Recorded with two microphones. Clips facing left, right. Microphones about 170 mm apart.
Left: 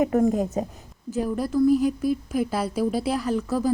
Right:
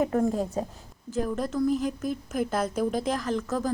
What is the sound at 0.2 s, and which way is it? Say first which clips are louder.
A woman's voice: left 4 dB; 15° left (ahead or behind).